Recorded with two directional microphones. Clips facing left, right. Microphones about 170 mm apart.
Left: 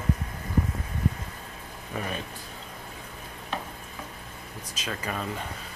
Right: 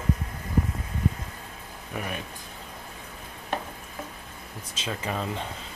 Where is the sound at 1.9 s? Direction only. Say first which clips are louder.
Left 1 dB; 10° right (ahead or behind).